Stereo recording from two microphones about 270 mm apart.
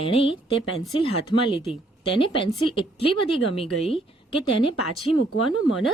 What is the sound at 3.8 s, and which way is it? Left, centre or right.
Speech, centre.